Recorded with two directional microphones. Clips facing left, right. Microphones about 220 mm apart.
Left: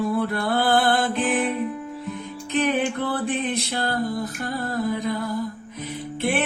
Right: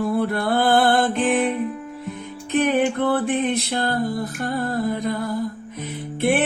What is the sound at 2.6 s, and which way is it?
Music, 55° right (ahead or behind).